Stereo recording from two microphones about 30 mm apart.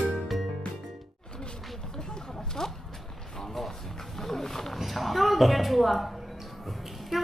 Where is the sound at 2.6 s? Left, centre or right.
Centre.